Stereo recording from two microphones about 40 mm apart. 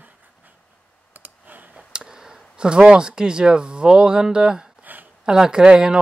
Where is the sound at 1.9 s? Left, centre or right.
Centre.